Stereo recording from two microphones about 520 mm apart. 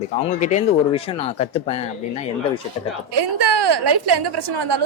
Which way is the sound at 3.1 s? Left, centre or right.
Right.